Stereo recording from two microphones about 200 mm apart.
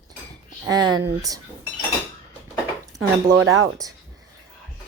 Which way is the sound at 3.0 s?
90° right.